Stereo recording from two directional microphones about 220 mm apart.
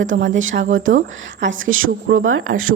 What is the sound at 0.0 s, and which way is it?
Speech, 60° right (ahead or behind).